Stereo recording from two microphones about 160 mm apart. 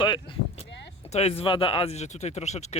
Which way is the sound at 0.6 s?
90° left.